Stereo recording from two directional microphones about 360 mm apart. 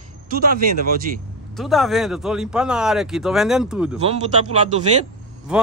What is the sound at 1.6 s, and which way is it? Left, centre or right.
Speech, centre.